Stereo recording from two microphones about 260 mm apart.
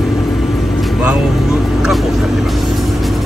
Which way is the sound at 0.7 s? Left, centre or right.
Centre.